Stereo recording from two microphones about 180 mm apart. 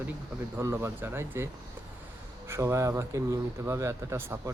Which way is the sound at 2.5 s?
15° right (ahead or behind).